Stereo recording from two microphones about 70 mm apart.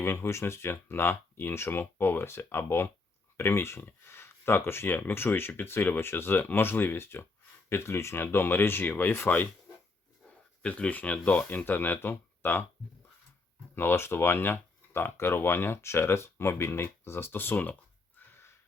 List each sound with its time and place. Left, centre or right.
0.0 s speech: left
10.6 s speech: centre
13.7 s speech: left